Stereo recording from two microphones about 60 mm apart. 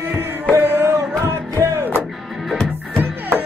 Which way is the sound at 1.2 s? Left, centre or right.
Right.